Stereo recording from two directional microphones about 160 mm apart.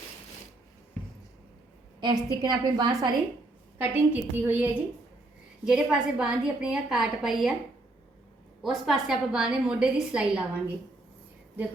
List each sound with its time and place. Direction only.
2.0 s a woman's voice: 30° right (ahead or behind)
3.8 s a woman's voice: 15° right (ahead or behind)
8.6 s a woman's voice: centre (ahead or behind)